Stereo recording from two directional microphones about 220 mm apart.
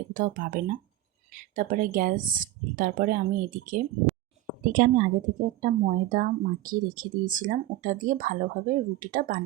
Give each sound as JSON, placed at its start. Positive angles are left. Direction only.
{"t": 0.1, "sound": "speech", "side_deg": -40}